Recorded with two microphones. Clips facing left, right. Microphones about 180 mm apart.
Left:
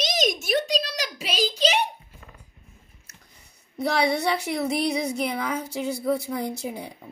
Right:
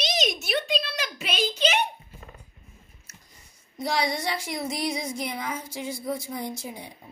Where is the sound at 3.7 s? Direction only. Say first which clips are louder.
Left 4 dB; 65° left (ahead or behind).